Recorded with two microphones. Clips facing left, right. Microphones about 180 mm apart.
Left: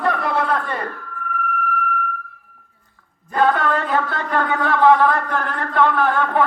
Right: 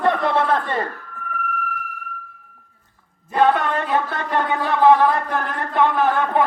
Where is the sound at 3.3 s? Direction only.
20° right (ahead or behind).